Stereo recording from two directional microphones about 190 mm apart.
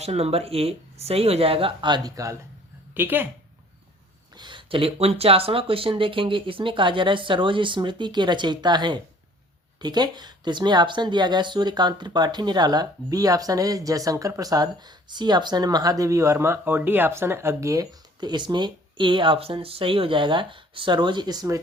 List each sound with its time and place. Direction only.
0.0 s speech: 30° right (ahead or behind); by 3.2 s 10° right (ahead or behind)
4.4 s speech: 25° right (ahead or behind)